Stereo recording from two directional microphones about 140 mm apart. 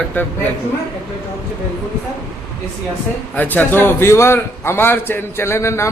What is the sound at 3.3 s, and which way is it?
A man's voice, 15° left (ahead or behind).